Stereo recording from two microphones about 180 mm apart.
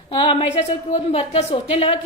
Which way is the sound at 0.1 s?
30° left (ahead or behind).